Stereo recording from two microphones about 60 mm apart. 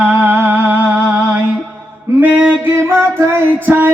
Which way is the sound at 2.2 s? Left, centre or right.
Right.